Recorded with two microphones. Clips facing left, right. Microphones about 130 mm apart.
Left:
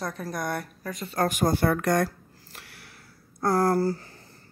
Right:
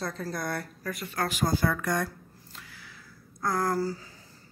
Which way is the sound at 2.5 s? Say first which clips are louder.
Left 1 dB; 70° left (ahead or behind).